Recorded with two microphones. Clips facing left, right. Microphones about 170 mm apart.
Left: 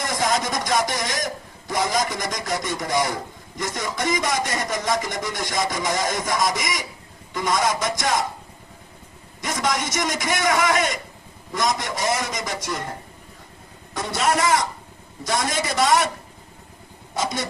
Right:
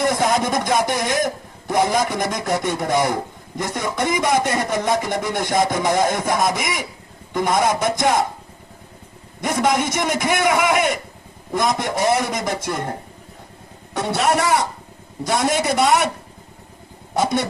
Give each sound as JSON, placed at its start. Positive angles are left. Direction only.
{"t": 0.0, "sound": "a sound", "side_deg": -60}
{"t": 1.9, "sound": "speech", "side_deg": -60}
{"t": 9.4, "sound": "speech", "side_deg": -55}
{"t": 13.9, "sound": "speech", "side_deg": -65}